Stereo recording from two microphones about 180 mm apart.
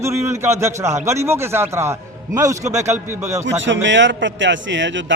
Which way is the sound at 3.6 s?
90° right.